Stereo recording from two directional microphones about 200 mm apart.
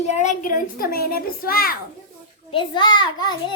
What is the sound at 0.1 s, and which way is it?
A child's voice, 35° left (ahead or behind).